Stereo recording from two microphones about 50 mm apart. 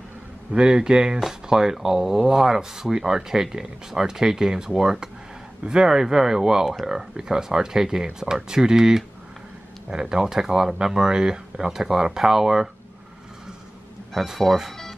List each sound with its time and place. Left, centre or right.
0.5 s speech: centre
14.1 s speech: centre
14.4 s speech: centre